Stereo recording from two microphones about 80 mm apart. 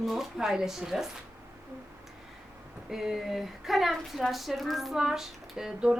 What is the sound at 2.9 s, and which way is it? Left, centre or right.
Speech, centre.